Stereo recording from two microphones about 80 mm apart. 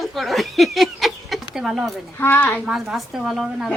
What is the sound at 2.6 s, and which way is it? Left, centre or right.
A woman's voice, centre.